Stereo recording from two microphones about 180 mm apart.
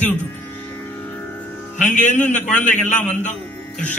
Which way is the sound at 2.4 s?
10° left (ahead or behind).